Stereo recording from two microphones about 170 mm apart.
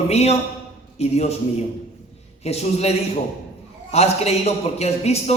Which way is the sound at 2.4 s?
40° left (ahead or behind).